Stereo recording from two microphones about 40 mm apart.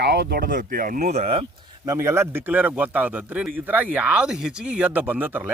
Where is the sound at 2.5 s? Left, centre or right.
Right.